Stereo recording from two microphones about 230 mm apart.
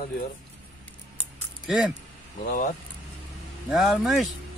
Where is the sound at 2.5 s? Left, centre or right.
Left.